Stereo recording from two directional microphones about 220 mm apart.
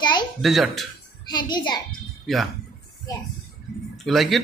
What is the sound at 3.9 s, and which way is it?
Speech, centre (ahead or behind).